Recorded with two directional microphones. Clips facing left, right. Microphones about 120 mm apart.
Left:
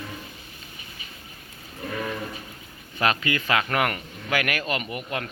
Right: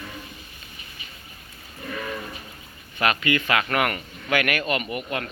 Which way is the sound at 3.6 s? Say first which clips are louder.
Right 1 dB; 20° left (ahead or behind).